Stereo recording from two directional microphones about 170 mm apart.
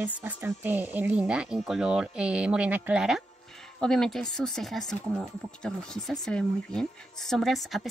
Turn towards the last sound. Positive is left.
turn(degrees=0)  # may be behind; listen again after turning